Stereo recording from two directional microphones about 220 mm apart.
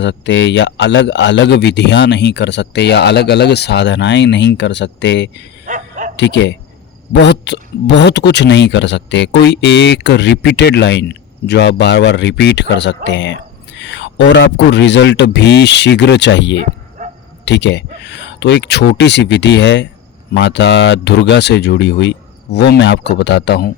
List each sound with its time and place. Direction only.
0.0 s speech: 55° left (ahead or behind)
5.6 s a sound: 35° right (ahead or behind)
6.1 s speech: 55° left (ahead or behind)
17.0 s bow-wow: 35° right (ahead or behind)
17.4 s speech: 50° left (ahead or behind)